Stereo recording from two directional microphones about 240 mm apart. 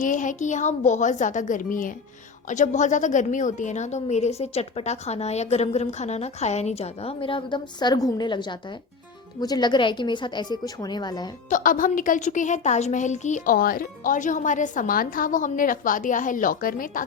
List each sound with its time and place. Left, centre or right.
0.0 s a woman's voice: left; by 11.3 s centre
11.4 s a woman's voice: left